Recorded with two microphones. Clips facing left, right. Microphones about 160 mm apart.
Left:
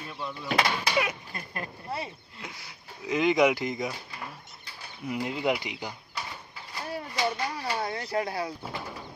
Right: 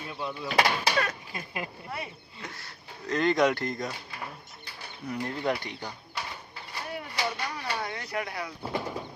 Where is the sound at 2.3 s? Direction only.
5° left (ahead or behind).